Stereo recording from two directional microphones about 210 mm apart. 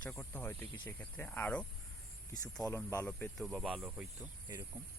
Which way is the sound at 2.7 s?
10° left (ahead or behind).